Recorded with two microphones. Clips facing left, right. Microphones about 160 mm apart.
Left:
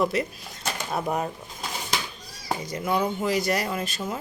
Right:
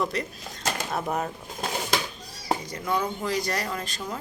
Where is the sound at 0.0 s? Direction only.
5° left (ahead or behind).